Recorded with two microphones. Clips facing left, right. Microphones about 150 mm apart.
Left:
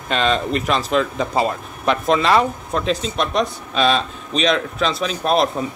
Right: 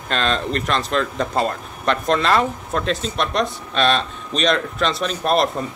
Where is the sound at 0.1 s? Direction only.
5° left (ahead or behind).